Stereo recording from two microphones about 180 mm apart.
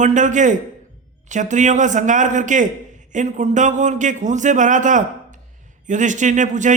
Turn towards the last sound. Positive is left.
turn(degrees=-45)  # may be behind; listen again after turning